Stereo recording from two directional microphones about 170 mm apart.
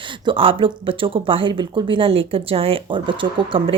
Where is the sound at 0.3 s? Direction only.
30° right (ahead or behind).